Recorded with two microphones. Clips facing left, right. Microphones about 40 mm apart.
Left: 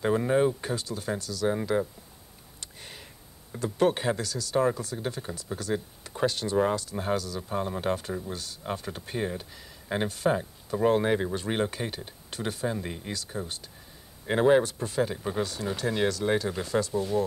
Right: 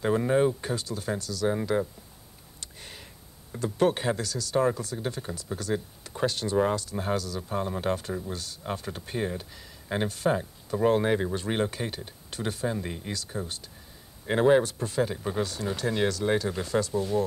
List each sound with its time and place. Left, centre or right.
0.0 s speech: centre
2.6 s a sound: centre
3.5 s speech: centre